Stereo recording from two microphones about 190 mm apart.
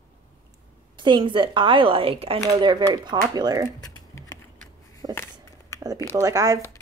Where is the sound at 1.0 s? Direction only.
25° right (ahead or behind).